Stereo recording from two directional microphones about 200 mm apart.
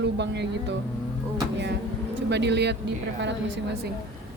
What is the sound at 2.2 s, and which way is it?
Speech, 60° right (ahead or behind).